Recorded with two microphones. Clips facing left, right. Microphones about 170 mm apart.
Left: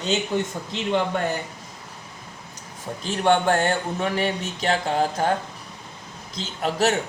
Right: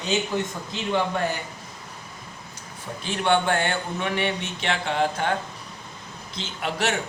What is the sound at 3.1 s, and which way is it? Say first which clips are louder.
Speech: left 3 dB; 45° left (ahead or behind).